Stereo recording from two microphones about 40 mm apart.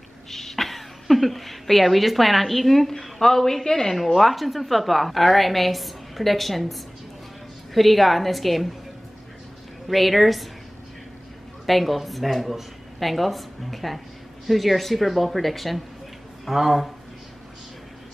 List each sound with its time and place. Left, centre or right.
0.3 s a woman's voice: centre
9.8 s speech: centre
11.6 s speech: centre